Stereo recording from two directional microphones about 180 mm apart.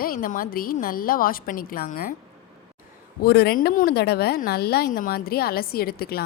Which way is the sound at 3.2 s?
60° left (ahead or behind).